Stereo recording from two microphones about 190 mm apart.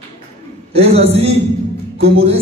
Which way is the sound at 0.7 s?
30° right (ahead or behind).